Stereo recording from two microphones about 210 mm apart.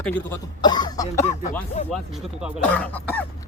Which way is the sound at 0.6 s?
20° left (ahead or behind).